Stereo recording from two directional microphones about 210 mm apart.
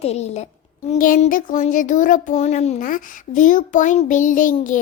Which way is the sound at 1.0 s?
40° left (ahead or behind).